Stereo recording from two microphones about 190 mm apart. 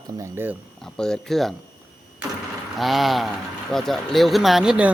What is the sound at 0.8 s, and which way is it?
Speech, centre (ahead or behind).